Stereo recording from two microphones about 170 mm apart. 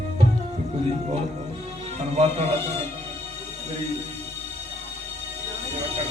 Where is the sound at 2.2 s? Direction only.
40° right (ahead or behind).